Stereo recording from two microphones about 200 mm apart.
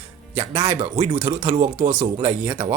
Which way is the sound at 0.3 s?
15° right (ahead or behind).